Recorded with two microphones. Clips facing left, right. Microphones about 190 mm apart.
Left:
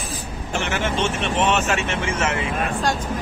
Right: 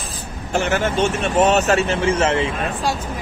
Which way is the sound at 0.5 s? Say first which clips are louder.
Right 5 dB; 40° right (ahead or behind).